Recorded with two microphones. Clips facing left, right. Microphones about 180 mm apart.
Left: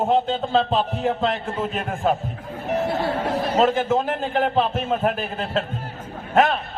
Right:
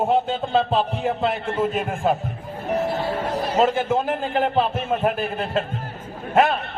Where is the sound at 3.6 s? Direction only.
10° right (ahead or behind).